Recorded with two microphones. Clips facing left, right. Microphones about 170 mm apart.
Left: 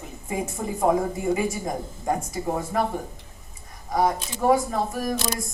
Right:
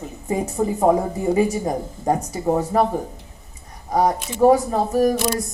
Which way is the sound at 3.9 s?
35° right (ahead or behind).